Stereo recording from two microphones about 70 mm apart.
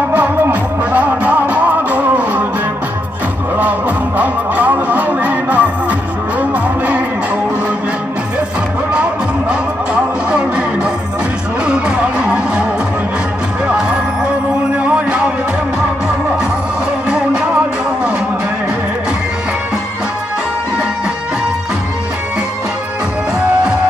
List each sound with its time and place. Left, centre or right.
0.1 s music: right
4.2 s music: right
10.3 s music: centre
13.7 s music: centre